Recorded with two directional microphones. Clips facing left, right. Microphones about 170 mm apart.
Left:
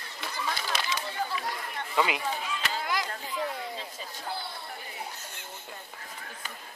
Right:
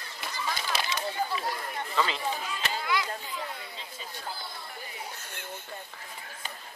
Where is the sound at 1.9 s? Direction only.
15° left (ahead or behind).